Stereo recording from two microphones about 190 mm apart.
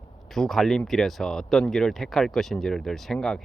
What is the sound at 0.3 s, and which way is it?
Speech, centre (ahead or behind).